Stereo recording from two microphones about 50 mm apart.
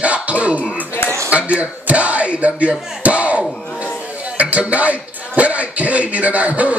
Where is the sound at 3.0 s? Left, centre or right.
Right.